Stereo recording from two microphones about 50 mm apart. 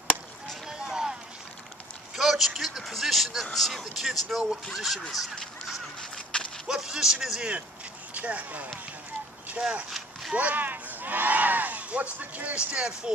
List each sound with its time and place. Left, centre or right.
0.7 s vehicle: centre
2.1 s a sound: centre
3.5 s speech: centre
5.9 s a sound: centre
6.7 s a man's voice: centre
8.1 s speech: right
9.8 s a sound: centre
10.3 s speech: right
12.5 s speech: right